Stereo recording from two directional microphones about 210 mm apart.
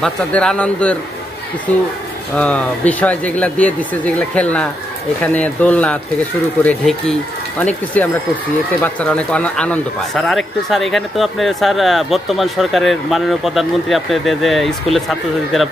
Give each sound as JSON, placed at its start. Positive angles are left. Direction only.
{"t": 0.0, "sound": "speech", "side_deg": 5}
{"t": 2.3, "sound": "speech", "side_deg": 5}